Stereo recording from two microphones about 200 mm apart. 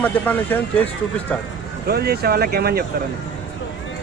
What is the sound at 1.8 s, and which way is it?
Speech, 50° right (ahead or behind).